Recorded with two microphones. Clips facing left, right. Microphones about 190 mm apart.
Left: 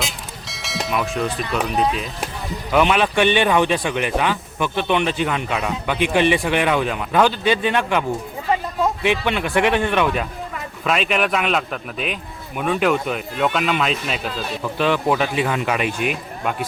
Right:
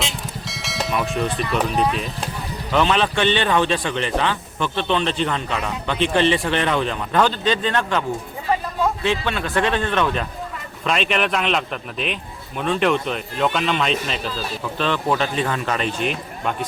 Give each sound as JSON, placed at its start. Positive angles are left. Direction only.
{"t": 0.4, "sound": "speech", "side_deg": 0}
{"t": 9.0, "sound": "speech", "side_deg": 15}